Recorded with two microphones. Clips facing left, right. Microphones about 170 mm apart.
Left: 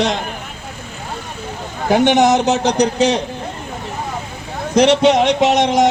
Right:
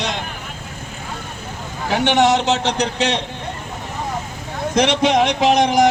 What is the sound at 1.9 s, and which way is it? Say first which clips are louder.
A man's voice: left 3 dB; 45° left (ahead or behind).